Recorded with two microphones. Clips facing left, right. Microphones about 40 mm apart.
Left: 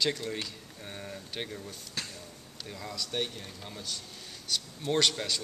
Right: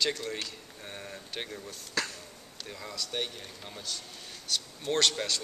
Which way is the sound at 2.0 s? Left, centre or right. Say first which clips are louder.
Right 7 dB; right.